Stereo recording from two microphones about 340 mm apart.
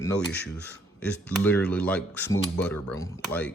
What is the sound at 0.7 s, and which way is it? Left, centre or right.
Speech, centre.